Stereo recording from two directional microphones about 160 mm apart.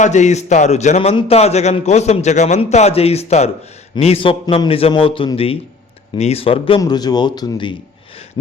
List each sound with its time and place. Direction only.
0.0 s a man's voice: 50° left (ahead or behind); by 7.8 s 25° left (ahead or behind)